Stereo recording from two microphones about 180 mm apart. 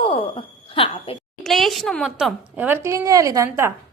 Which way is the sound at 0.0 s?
30° left (ahead or behind).